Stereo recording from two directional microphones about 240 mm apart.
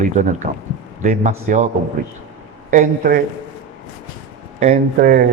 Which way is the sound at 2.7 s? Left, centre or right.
Right.